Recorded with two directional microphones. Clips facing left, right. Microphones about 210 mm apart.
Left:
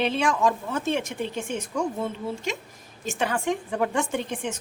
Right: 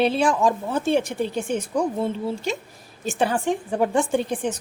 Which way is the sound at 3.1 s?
35° right (ahead or behind).